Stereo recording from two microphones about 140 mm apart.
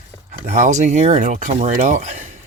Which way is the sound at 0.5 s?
60° right (ahead or behind).